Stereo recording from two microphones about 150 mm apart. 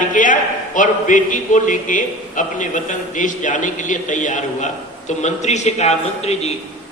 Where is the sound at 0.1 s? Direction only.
60° left (ahead or behind).